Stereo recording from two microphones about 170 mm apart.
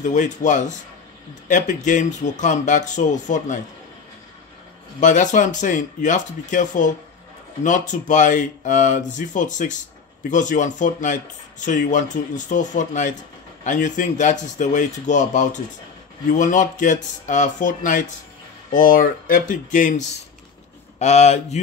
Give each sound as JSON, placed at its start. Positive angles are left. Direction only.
{"t": 0.0, "sound": "speech", "side_deg": 45}
{"t": 5.0, "sound": "speech", "side_deg": 45}